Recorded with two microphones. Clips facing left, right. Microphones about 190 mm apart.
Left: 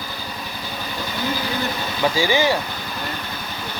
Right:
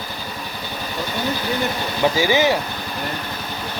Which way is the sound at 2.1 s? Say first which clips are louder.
Right 1 dB; 20° right (ahead or behind).